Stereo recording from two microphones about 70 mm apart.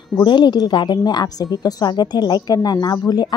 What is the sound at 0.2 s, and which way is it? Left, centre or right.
A woman's voice, left.